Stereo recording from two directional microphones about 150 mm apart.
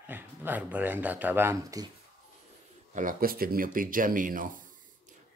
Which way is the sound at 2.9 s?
70° right (ahead or behind).